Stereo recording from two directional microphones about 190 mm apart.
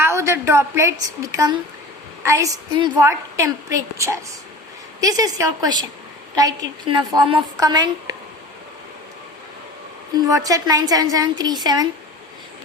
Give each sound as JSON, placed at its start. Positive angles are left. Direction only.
{"t": 0.0, "sound": "a woman's voice", "side_deg": -15}
{"t": 10.2, "sound": "a woman's voice", "side_deg": -20}